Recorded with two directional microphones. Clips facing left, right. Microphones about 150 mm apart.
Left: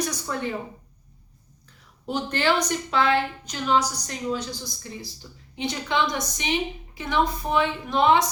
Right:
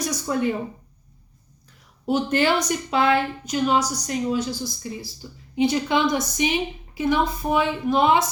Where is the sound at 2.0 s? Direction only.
10° right (ahead or behind).